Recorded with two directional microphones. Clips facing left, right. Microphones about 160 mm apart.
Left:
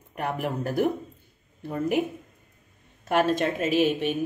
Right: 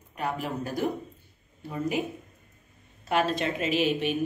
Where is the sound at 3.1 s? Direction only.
50° left (ahead or behind).